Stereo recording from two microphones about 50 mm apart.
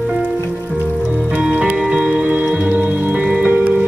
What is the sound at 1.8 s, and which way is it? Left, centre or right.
Music, centre.